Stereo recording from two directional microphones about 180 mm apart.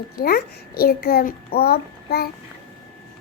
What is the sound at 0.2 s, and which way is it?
A child's voice, 60° left (ahead or behind).